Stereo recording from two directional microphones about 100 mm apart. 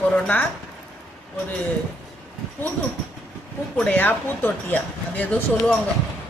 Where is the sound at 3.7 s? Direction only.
15° left (ahead or behind).